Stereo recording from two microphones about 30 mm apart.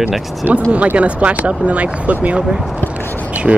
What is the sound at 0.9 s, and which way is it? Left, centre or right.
Speech, right.